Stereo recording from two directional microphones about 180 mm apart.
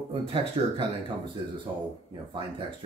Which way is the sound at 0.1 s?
30° right (ahead or behind).